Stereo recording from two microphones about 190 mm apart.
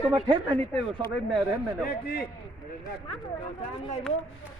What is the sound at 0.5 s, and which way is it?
Battle cry, 10° left (ahead or behind).